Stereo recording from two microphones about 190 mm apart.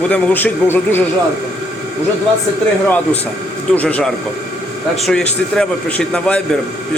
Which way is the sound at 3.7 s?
5° left (ahead or behind).